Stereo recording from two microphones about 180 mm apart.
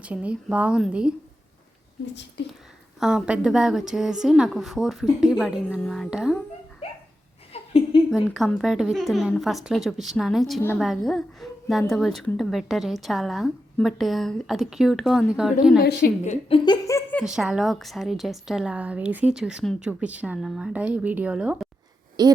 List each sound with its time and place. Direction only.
0.0 s a woman's voice: 5° right (ahead or behind)
3.0 s a woman's voice: 5° right (ahead or behind)
7.5 s a sound: 35° left (ahead or behind)
8.1 s a woman's voice: centre (ahead or behind)
15.8 s a woman's voice: 60° left (ahead or behind)
16.2 s speech: 40° left (ahead or behind)
16.6 s a sound: 15° left (ahead or behind)
17.2 s a woman's voice: 5° right (ahead or behind)
22.2 s speech: 20° right (ahead or behind)